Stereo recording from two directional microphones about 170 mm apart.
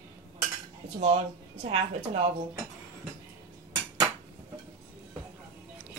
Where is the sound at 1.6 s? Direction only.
40° right (ahead or behind).